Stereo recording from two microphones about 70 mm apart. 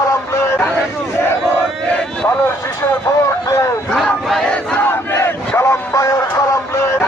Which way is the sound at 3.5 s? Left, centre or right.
Left.